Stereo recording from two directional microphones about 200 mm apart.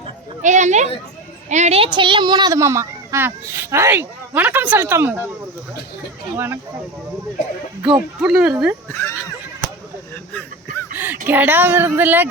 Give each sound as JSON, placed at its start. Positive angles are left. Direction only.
{"t": 0.4, "sound": "a woman's voice", "side_deg": -35}
{"t": 6.3, "sound": "a woman's voice", "side_deg": -10}
{"t": 8.2, "sound": "speech", "side_deg": -5}
{"t": 8.9, "sound": "speech", "side_deg": 10}
{"t": 10.9, "sound": "a woman's voice", "side_deg": -10}